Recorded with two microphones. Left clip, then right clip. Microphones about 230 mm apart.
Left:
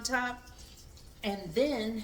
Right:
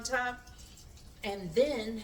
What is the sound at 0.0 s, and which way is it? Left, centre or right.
Speech, left.